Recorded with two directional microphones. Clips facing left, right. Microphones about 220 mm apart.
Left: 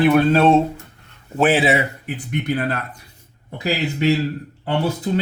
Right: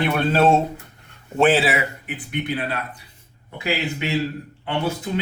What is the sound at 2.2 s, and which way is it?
A man's voice, 45° left (ahead or behind).